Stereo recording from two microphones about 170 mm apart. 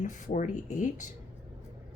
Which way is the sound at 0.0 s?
45° left (ahead or behind).